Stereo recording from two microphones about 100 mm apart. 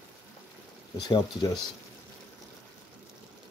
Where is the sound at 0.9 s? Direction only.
40° left (ahead or behind).